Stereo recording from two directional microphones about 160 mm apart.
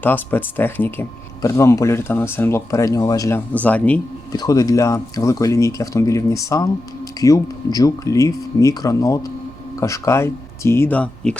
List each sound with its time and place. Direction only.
0.0 s speech: 10° left (ahead or behind)
4.3 s speech: 25° left (ahead or behind); by 11.3 s 5° left (ahead or behind)